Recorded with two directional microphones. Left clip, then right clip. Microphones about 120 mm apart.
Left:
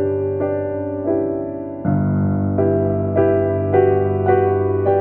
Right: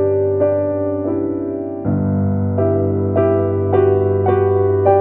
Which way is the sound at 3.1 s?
20° right (ahead or behind).